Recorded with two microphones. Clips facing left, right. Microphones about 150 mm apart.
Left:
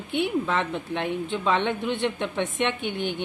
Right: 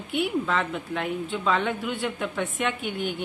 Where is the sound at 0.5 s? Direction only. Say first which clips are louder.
Left 1 dB; 25° left (ahead or behind).